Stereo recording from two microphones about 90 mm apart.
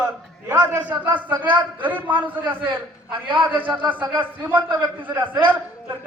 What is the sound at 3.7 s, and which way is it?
Speech, 15° right (ahead or behind).